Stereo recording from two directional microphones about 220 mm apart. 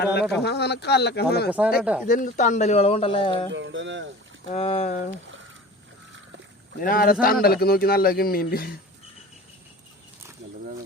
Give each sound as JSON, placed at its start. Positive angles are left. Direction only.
{"t": 0.0, "sound": "speech", "side_deg": 45}
{"t": 1.5, "sound": "speech", "side_deg": -5}
{"t": 2.0, "sound": "speech", "side_deg": 35}
{"t": 3.5, "sound": "speech", "side_deg": -55}
{"t": 4.5, "sound": "speech", "side_deg": 30}
{"t": 6.7, "sound": "speech", "side_deg": 40}